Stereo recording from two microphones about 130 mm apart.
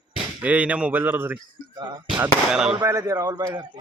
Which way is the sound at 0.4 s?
10° right (ahead or behind).